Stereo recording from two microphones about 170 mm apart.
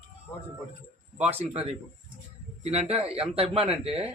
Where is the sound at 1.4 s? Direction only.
35° right (ahead or behind).